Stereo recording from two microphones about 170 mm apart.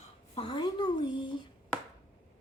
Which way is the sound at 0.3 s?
30° left (ahead or behind).